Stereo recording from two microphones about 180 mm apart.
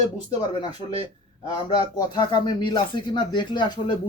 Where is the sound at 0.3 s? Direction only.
25° left (ahead or behind).